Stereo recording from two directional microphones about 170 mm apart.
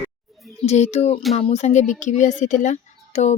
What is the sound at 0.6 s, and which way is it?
Speech, 40° left (ahead or behind).